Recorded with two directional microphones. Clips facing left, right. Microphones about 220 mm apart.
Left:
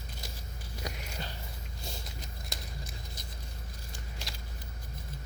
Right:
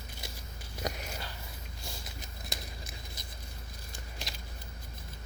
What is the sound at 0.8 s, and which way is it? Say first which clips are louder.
Sniff: right 5 dB; 45° right (ahead or behind).